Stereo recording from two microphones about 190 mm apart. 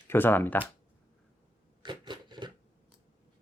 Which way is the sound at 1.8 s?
25° right (ahead or behind).